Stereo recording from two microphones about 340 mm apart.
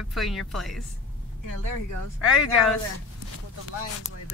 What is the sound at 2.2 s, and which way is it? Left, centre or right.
Speech, centre.